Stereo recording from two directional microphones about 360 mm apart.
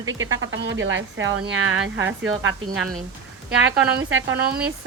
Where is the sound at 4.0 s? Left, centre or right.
Right.